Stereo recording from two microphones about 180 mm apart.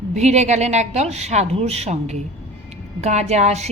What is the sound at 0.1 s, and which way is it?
Speech, 40° right (ahead or behind).